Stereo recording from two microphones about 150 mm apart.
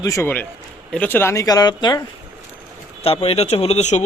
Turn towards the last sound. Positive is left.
turn(degrees=50)  # may be behind; listen again after turning